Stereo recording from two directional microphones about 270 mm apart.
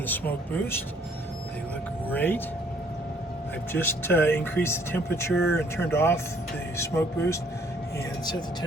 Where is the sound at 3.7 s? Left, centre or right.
Centre.